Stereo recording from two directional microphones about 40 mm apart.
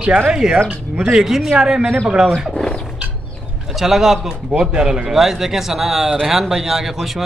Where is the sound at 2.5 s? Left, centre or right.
Centre.